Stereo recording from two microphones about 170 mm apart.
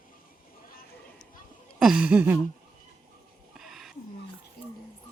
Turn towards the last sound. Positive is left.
turn(degrees=0)  # may be behind; listen again after turning